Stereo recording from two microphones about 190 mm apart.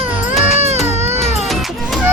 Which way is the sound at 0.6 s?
35° right (ahead or behind).